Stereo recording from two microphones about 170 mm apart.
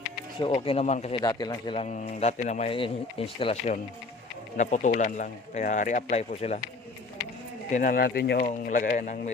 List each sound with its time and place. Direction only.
0.3 s speech: 30° left (ahead or behind)
1.2 s a man's voice: 25° left (ahead or behind)
1.8 s speech: 40° left (ahead or behind)
7.7 s speech: 50° left (ahead or behind); by 8.4 s 75° left (ahead or behind)
8.4 s speech: 50° left (ahead or behind)